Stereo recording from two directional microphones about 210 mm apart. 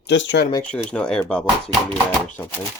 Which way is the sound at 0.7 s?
5° left (ahead or behind).